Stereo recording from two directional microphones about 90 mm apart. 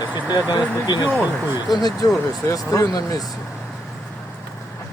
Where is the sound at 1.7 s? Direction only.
45° left (ahead or behind).